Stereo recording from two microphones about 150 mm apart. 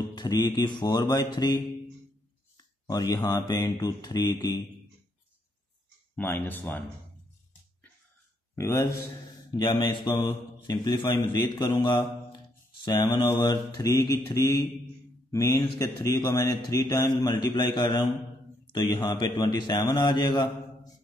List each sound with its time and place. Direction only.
0.1 s speech: 25° left (ahead or behind)
6.1 s speech: 15° left (ahead or behind)
8.5 s speech: 20° left (ahead or behind)
12.8 s a man's voice: 25° left (ahead or behind)